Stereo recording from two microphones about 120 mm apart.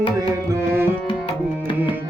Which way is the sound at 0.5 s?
20° right (ahead or behind).